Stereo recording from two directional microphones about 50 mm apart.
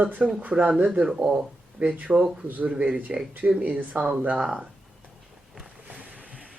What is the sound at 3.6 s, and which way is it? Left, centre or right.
Speech, right.